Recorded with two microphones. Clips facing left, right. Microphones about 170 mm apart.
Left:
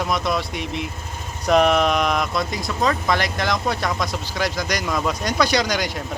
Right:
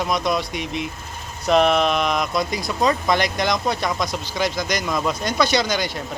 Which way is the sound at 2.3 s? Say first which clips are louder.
Right 1 dB; 20° right (ahead or behind).